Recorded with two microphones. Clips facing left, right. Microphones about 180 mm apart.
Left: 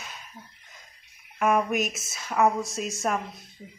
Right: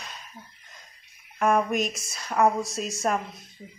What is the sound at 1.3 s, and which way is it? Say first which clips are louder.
A woman's voice: right 1 dB; centre (ahead or behind).